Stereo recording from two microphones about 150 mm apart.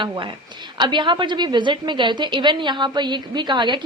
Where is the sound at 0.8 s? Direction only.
30° right (ahead or behind).